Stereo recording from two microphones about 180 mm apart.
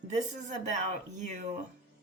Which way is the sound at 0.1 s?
45° right (ahead or behind).